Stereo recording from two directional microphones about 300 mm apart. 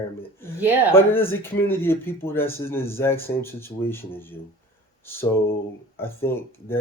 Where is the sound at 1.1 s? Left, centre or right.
Centre.